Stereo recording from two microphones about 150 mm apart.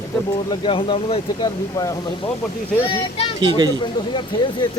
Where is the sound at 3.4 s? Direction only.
30° right (ahead or behind).